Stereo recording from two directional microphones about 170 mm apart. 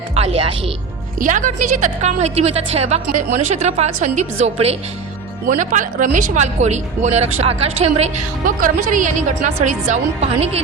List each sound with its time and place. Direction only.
0.1 s speech: 35° right (ahead or behind)
1.2 s a woman's voice: 50° right (ahead or behind)
5.5 s a woman's voice: 50° right (ahead or behind)
8.4 s a woman's voice: 50° right (ahead or behind)